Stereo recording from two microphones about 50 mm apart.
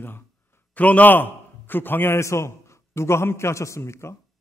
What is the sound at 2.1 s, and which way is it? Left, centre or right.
A man's voice, left.